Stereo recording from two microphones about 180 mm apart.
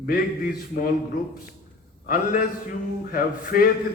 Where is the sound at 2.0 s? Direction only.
50° left (ahead or behind).